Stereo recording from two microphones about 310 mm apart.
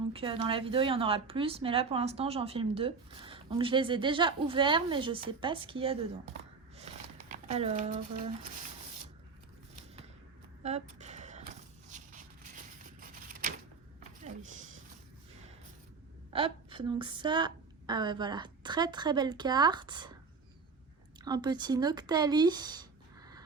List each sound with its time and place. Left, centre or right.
0.1 s speech: centre
7.3 s speech: right
10.6 s a sound: right
11.9 s vehicle: right
14.3 s a sound: right
16.3 s speech: centre
21.2 s speech: centre